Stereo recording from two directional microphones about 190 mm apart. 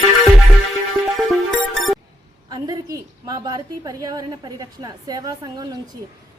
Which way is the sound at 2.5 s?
20° right (ahead or behind).